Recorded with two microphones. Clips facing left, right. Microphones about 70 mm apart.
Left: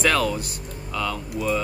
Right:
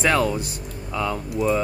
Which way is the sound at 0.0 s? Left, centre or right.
Centre.